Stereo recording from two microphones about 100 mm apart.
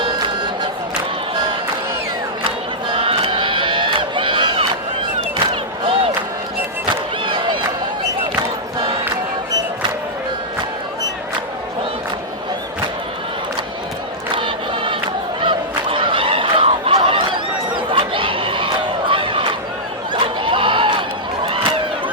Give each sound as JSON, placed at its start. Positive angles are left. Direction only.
{"t": 2.9, "sound": "crowd", "side_deg": -60}
{"t": 5.8, "sound": "music", "side_deg": -70}
{"t": 6.9, "sound": "a sound", "side_deg": -55}
{"t": 8.4, "sound": "crowd", "side_deg": -60}
{"t": 14.3, "sound": "a sound", "side_deg": -55}
{"t": 21.4, "sound": "run", "side_deg": -65}